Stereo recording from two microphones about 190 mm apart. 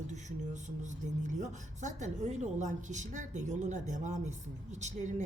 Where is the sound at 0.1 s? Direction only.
40° right (ahead or behind).